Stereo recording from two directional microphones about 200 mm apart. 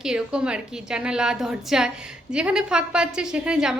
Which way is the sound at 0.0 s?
5° right (ahead or behind).